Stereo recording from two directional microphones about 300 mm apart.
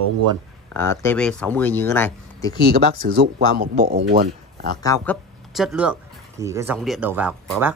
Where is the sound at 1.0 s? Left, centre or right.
Centre.